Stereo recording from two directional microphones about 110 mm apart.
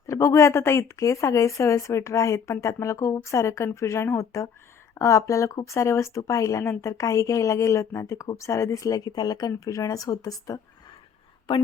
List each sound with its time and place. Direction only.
0.1 s speech: 25° left (ahead or behind)
11.5 s a woman's voice: 45° left (ahead or behind)